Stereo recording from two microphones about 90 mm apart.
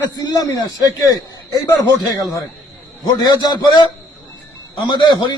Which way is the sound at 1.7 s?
35° left (ahead or behind).